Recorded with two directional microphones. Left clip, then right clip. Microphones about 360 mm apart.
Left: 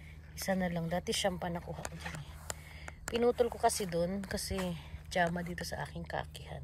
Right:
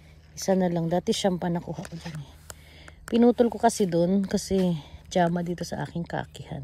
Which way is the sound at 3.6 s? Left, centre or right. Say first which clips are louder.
Right 9 dB; right.